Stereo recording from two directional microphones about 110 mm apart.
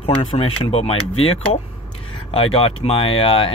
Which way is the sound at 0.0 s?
60° left (ahead or behind).